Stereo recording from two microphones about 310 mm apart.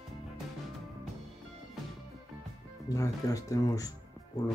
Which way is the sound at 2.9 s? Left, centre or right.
Centre.